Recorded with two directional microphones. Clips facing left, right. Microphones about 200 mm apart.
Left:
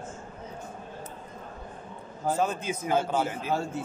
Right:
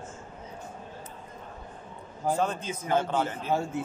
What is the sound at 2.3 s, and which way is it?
Speech, 5° left (ahead or behind).